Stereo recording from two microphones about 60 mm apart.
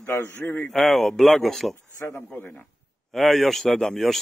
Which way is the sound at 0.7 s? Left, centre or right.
Centre.